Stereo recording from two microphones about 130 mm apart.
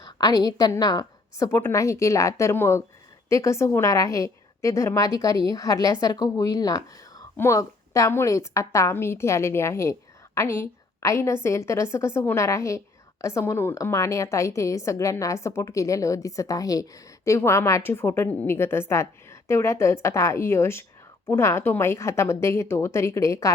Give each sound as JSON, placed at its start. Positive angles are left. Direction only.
{"t": 0.0, "sound": "a woman's voice", "side_deg": 30}